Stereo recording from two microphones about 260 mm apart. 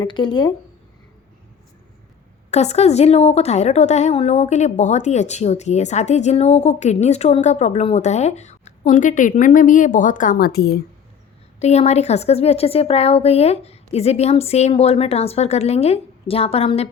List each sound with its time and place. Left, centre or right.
0.0 s speech: centre
2.5 s a woman's voice: left
11.6 s a woman's voice: left